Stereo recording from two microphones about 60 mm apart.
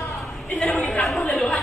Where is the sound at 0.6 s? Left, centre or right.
Centre.